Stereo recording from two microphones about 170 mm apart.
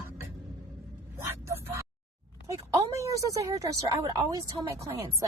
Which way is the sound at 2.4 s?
15° right (ahead or behind).